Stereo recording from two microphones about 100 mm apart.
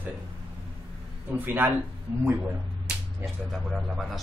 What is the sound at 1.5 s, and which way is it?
Speech, 20° right (ahead or behind).